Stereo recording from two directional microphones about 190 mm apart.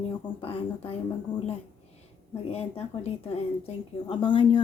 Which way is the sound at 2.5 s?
30° left (ahead or behind).